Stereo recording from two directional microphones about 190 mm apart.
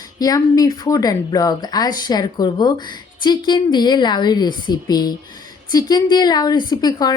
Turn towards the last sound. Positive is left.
turn(degrees=20)  # may be behind; listen again after turning